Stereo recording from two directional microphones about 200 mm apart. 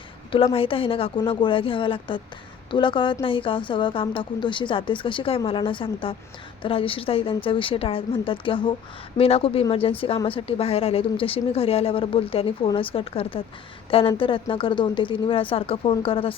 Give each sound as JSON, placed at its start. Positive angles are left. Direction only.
{"t": 0.3, "sound": "a woman's voice", "side_deg": 25}